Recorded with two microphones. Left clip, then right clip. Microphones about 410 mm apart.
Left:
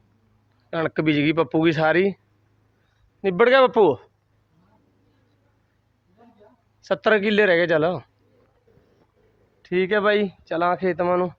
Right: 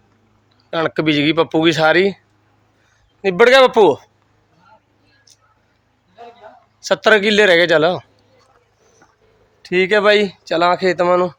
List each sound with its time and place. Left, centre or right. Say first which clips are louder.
0.7 s speech: right 5 dB; left
6.8 s speech: right 7 dB; left
9.6 s speech: right 7 dB; left